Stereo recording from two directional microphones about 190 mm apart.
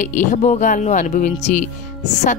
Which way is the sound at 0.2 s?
40° left (ahead or behind).